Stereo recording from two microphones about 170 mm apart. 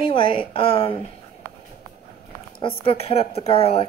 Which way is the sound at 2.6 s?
35° left (ahead or behind).